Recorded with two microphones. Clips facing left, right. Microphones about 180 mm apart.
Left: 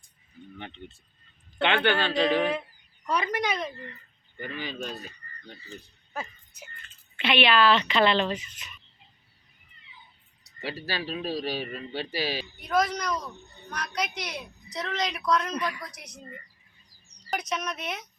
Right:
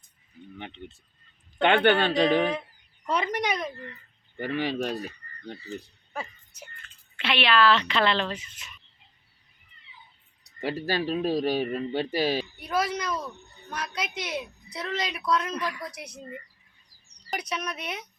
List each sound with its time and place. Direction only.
0.6 s a woman's voice: 20° right (ahead or behind)
1.6 s speech: 45° right (ahead or behind)
3.1 s a woman's voice: 20° right (ahead or behind)
4.4 s speech: 70° right (ahead or behind)
7.2 s speech: centre (ahead or behind)
10.6 s speech: 50° right (ahead or behind)
12.6 s a woman's voice: 10° right (ahead or behind)
17.4 s a woman's voice: 10° right (ahead or behind)